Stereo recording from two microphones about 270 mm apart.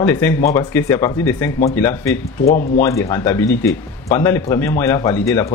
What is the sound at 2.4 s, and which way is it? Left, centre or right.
Speech, left.